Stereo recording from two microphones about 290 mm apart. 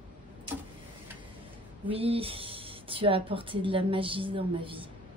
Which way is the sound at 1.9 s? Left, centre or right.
Centre.